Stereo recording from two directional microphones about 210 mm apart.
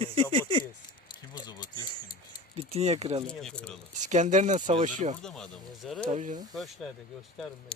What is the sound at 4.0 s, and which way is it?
Speech, 35° right (ahead or behind).